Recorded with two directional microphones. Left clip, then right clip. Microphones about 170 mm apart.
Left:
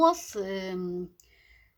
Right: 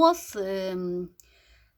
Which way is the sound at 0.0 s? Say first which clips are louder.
Right 2 dB; 30° right (ahead or behind).